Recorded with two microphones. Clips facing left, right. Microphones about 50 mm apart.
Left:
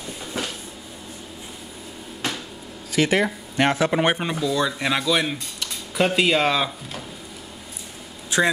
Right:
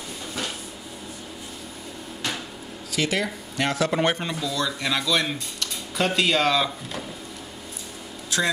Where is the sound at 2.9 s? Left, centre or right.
Left; by 6.7 s centre.